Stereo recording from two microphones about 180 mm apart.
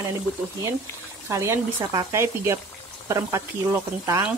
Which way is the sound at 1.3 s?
15° right (ahead or behind).